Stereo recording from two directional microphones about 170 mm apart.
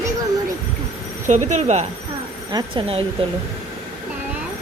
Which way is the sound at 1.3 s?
45° right (ahead or behind).